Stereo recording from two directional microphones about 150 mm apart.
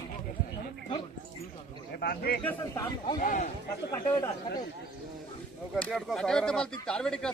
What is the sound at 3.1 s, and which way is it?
Speech, 55° left (ahead or behind).